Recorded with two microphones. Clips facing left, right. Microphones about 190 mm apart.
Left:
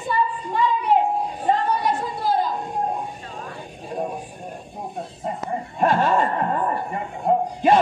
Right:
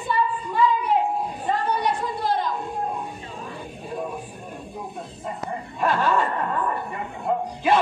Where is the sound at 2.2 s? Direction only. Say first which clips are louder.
Left 3 dB; centre (ahead or behind).